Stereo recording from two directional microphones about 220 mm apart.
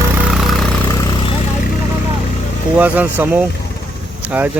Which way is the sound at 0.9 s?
15° left (ahead or behind).